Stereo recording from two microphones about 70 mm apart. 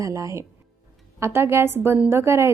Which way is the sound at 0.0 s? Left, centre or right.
Right.